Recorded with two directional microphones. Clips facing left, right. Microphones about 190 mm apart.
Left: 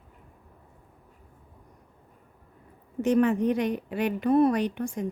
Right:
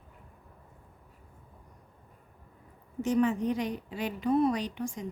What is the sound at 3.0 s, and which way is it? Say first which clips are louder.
A woman's voice: left 4 dB; 60° left (ahead or behind).